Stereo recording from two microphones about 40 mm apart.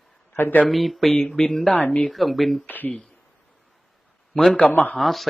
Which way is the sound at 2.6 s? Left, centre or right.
Left.